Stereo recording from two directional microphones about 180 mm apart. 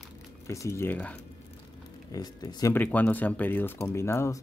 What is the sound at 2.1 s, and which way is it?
Speech, 20° left (ahead or behind).